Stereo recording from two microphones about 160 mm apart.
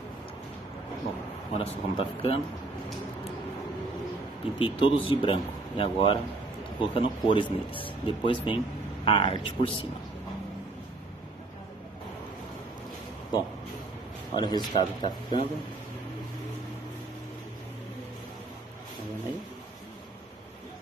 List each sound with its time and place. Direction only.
1.6 s speech: 35° left (ahead or behind)
4.6 s speech: 35° left (ahead or behind)
13.3 s a man's voice: 25° left (ahead or behind)